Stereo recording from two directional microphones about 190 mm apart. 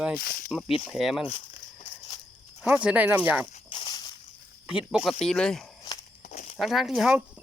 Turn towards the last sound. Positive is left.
turn(degrees=-5)  # may be behind; listen again after turning